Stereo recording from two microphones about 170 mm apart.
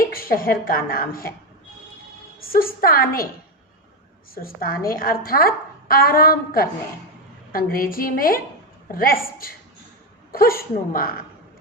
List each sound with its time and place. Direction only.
0.1 s a woman's voice: 60° left (ahead or behind)
2.5 s a woman's voice: 60° left (ahead or behind)
4.4 s a woman's voice: 60° left (ahead or behind)